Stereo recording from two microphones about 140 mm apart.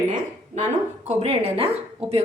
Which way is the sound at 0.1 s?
55° right (ahead or behind).